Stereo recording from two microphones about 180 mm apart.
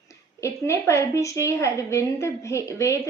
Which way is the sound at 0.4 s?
15° left (ahead or behind).